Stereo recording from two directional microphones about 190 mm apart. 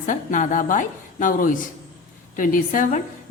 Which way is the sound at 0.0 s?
45° left (ahead or behind).